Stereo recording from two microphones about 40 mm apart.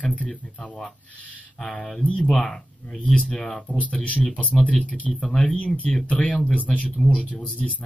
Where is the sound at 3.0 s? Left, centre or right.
Left.